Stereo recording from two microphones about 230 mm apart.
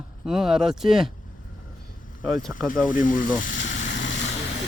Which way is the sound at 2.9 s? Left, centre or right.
Left.